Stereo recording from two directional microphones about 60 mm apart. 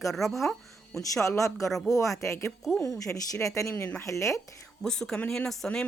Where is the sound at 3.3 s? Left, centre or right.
Left.